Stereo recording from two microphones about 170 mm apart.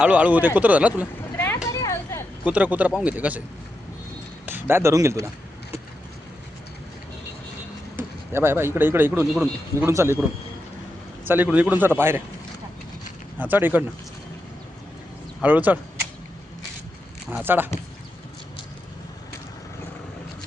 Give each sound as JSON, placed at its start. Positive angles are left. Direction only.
{"t": 0.0, "sound": "speech", "side_deg": -10}
{"t": 1.6, "sound": "a sound", "side_deg": 15}
{"t": 2.4, "sound": "speech", "side_deg": -10}
{"t": 4.4, "sound": "speech", "side_deg": -15}
{"t": 7.9, "sound": "speech", "side_deg": -15}
{"t": 11.3, "sound": "speech", "side_deg": -10}
{"t": 13.4, "sound": "speech", "side_deg": -10}
{"t": 15.4, "sound": "speech", "side_deg": -10}
{"t": 17.4, "sound": "speech", "side_deg": -10}